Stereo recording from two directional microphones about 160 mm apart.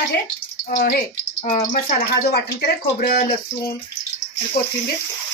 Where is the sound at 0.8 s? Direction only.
65° left (ahead or behind).